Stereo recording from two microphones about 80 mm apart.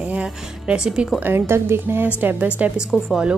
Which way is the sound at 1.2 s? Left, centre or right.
Right.